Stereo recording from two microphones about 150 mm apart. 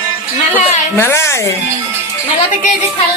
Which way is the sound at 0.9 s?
15° left (ahead or behind).